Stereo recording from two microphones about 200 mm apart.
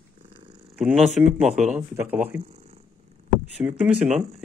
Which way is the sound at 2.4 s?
30° right (ahead or behind).